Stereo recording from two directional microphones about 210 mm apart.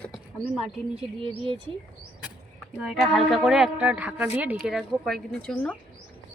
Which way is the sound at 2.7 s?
Centre (ahead or behind).